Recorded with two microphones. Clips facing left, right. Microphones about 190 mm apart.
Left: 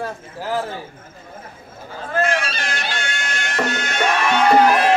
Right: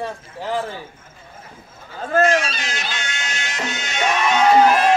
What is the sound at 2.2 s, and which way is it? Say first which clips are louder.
Music: right 2 dB; 55° left (ahead or behind).